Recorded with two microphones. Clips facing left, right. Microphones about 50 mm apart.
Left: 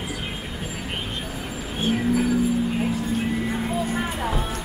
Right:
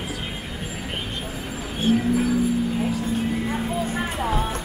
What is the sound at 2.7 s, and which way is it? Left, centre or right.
Music, left.